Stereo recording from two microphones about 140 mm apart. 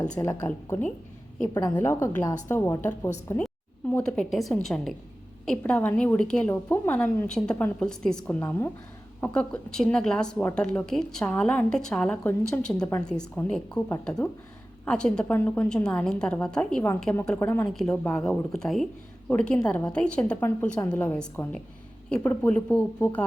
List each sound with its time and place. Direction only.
0.4 s a woman's voice: 10° left (ahead or behind)
1.5 s speech: 30° left (ahead or behind)
1.8 s a woman's voice: 15° left (ahead or behind)
3.4 s a woman's voice: 10° left (ahead or behind)